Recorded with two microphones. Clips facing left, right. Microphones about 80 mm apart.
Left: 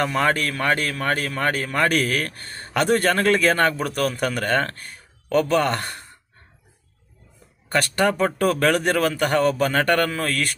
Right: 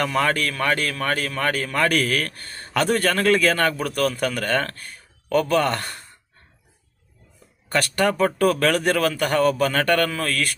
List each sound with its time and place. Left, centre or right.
0.0 s a man's voice: centre
7.7 s a man's voice: centre